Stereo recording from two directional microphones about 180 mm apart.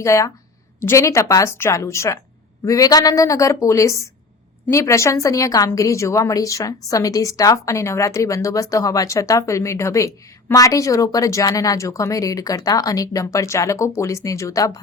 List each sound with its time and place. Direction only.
0.0 s a woman's voice: 15° left (ahead or behind)